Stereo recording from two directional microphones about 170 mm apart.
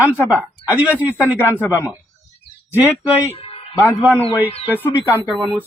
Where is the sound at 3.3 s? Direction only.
35° left (ahead or behind).